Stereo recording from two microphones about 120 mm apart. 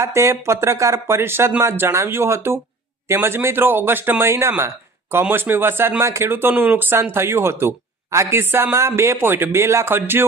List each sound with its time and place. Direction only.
0.0 s speech: 25° right (ahead or behind)